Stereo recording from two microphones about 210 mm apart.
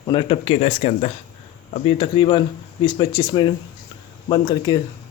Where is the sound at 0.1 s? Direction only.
25° left (ahead or behind).